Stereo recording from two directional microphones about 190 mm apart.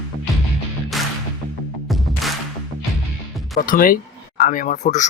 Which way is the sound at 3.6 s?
45° left (ahead or behind).